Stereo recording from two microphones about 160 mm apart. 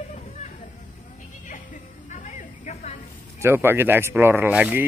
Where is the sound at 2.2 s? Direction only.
50° left (ahead or behind).